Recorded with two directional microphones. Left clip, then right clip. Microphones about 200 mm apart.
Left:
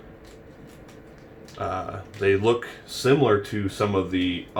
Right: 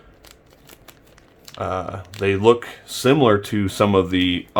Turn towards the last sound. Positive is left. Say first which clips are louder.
# right 6 dB
turn(degrees=-35)  # may be behind; listen again after turning